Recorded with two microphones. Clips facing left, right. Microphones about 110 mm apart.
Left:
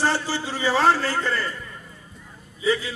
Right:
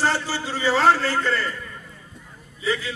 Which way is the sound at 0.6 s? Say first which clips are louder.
Right 1 dB; 15° left (ahead or behind).